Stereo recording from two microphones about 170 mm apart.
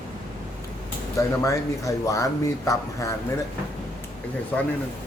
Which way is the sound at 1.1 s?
20° left (ahead or behind).